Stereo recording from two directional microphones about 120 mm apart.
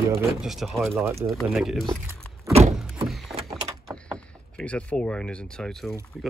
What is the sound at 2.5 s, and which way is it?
Door, 55° right (ahead or behind).